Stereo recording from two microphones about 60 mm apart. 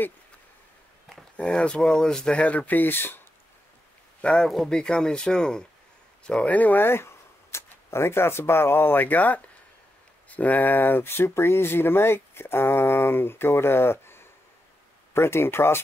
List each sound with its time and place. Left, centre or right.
1.5 s speech: centre; by 3.2 s left
4.2 s speech: centre; by 15.8 s left